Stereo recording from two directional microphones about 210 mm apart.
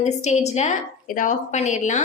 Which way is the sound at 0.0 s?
30° left (ahead or behind).